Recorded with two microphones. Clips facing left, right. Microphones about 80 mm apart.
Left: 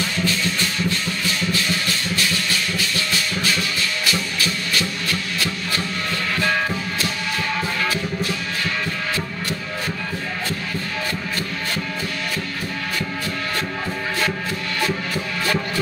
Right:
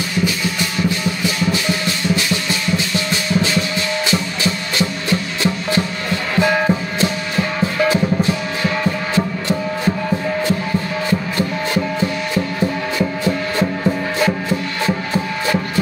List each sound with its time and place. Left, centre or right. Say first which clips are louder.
0.2 s music: right 5 dB; centre
7.0 s music: right 6 dB; right
11.1 s music: right 7 dB; right
14.2 s music: right 6 dB; right